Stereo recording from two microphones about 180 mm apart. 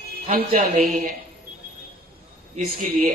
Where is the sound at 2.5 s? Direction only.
40° right (ahead or behind).